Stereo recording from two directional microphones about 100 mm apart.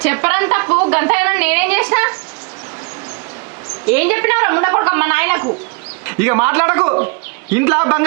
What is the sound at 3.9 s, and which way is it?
Speech, 20° right (ahead or behind).